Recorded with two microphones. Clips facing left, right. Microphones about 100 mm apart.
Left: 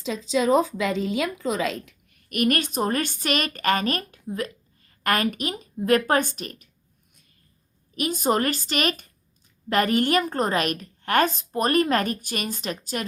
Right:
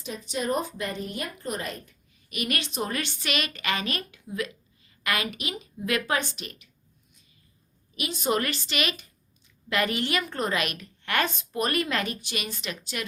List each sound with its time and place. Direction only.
0.0 s a woman's voice: 90° left; by 6.7 s 40° left (ahead or behind)
7.9 s a woman's voice: 45° left (ahead or behind)